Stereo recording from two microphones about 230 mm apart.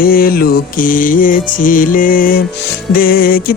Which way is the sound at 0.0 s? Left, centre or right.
Left.